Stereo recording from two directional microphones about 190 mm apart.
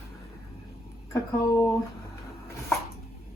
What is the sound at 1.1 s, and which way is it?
Speech, 15° left (ahead or behind).